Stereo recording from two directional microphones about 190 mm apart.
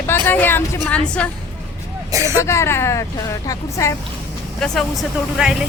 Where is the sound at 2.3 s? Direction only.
15° left (ahead or behind).